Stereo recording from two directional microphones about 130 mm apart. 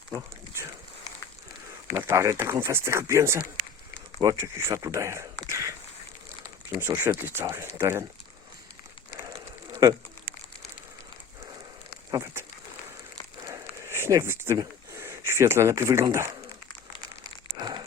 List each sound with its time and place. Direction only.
1.9 s speech: 20° right (ahead or behind)
12.1 s speech: 20° right (ahead or behind)
13.4 s a sound: 20° right (ahead or behind)
17.6 s crumpling: 35° right (ahead or behind)